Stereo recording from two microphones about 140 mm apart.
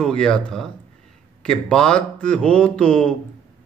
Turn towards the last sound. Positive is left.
turn(degrees=5)  # may be behind; listen again after turning